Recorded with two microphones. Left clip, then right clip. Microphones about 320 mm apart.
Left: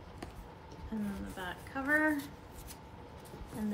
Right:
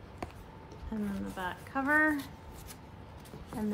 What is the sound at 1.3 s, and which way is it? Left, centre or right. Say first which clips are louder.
Speech: right 6 dB; centre.